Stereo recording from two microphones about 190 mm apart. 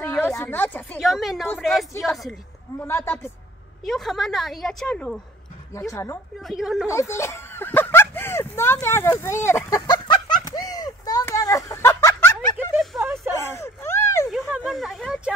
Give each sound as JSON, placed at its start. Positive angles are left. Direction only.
{"t": 0.0, "sound": "a woman's voice", "side_deg": 10}
{"t": 0.9, "sound": "a woman's voice", "side_deg": 0}
{"t": 2.8, "sound": "speech", "side_deg": 10}
{"t": 3.8, "sound": "a woman's voice", "side_deg": 0}
{"t": 6.4, "sound": "a woman's voice", "side_deg": 0}
{"t": 6.9, "sound": "speech", "side_deg": 15}
{"t": 9.2, "sound": "chicken", "side_deg": 15}
{"t": 12.5, "sound": "a sound", "side_deg": -10}
{"t": 13.3, "sound": "a sound", "side_deg": 15}
{"t": 14.4, "sound": "a sound", "side_deg": -5}